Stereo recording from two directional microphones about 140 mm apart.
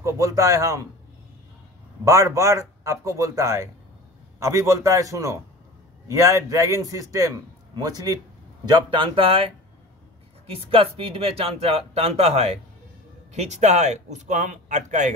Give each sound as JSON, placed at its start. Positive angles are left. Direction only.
{"t": 0.0, "sound": "a man's voice", "side_deg": -25}
{"t": 2.0, "sound": "a man's voice", "side_deg": -20}